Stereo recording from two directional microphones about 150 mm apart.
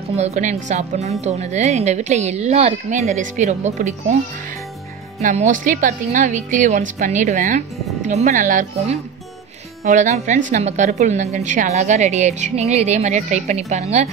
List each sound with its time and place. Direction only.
0.2 s a woman's voice: 50° right (ahead or behind)
5.2 s a woman's voice: 55° right (ahead or behind)